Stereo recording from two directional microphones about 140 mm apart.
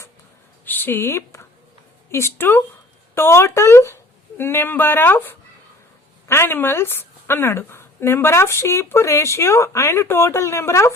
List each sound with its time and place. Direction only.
0.6 s a woman's voice: 15° left (ahead or behind)